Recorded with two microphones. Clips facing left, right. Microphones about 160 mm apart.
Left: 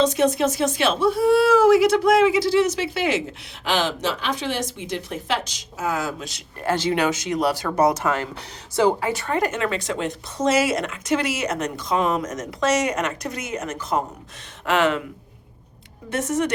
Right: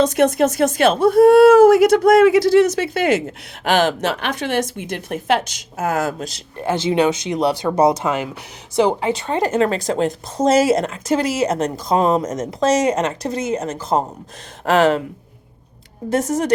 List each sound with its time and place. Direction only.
0.0 s speech: 55° right (ahead or behind)
6.6 s speech: 20° right (ahead or behind); by 15.0 s 35° right (ahead or behind)
16.0 s speech: 35° right (ahead or behind)